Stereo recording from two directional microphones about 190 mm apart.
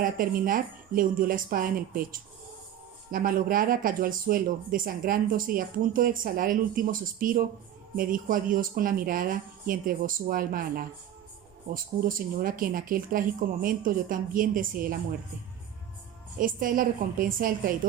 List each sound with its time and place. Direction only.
0.0 s speech: 45° right (ahead or behind)
16.4 s speech: 45° right (ahead or behind)